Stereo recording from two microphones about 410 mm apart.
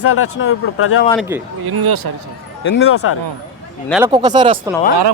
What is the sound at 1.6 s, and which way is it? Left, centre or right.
Speech, right.